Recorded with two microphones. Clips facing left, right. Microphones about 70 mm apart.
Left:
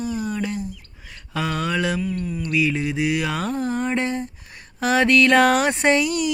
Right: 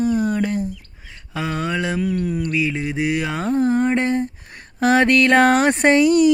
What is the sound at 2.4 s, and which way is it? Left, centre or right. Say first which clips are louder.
Speech: even; right.